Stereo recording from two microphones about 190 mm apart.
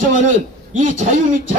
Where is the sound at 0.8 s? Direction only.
40° right (ahead or behind).